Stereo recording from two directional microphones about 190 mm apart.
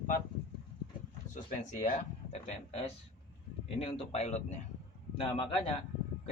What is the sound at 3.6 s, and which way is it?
A man's voice, 30° left (ahead or behind).